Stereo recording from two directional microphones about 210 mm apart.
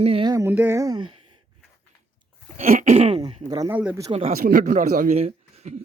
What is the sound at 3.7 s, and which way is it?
Speech, 10° right (ahead or behind).